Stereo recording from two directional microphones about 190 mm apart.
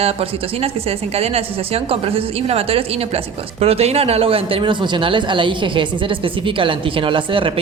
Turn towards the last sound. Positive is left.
turn(degrees=-25)  # may be behind; listen again after turning